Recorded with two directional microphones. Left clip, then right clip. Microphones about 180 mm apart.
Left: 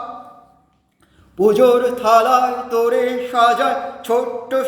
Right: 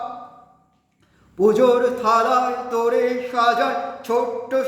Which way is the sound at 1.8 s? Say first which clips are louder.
Left 4 dB; centre (ahead or behind).